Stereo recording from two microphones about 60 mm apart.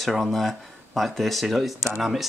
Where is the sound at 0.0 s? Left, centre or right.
Centre.